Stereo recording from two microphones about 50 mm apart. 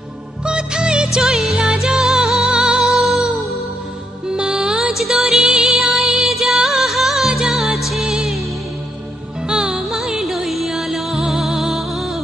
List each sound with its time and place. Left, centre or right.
0.5 s music: centre
2.4 s music: centre
2.8 s music: centre
4.3 s music: centre
9.5 s music: centre